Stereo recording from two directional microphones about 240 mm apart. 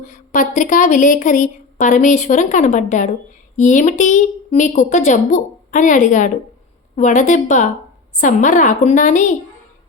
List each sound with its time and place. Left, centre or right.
0.0 s speech: left